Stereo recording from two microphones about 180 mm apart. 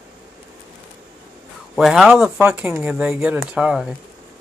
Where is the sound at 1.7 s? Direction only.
Centre (ahead or behind).